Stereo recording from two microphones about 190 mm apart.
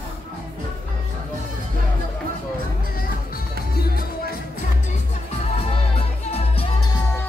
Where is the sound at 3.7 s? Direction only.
55° left (ahead or behind).